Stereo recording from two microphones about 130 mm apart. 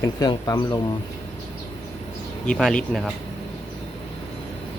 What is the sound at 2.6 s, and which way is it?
Speech, centre (ahead or behind).